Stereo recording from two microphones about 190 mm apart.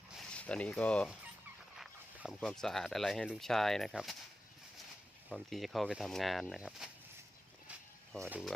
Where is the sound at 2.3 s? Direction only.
Centre (ahead or behind).